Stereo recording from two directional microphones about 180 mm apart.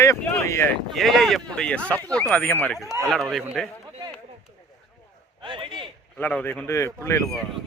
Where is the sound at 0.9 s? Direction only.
Centre (ahead or behind).